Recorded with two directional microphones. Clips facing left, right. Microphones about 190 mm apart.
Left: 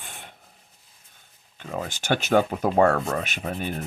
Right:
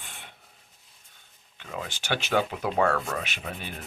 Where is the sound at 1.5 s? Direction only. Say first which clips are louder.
Left 5 dB; 45° left (ahead or behind).